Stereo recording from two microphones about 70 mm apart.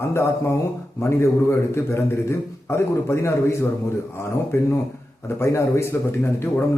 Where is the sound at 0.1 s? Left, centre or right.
Left.